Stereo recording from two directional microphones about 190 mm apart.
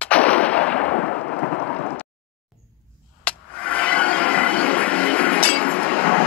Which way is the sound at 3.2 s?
5° left (ahead or behind).